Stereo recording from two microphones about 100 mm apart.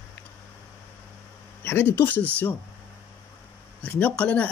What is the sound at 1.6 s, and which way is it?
Speech, 20° left (ahead or behind).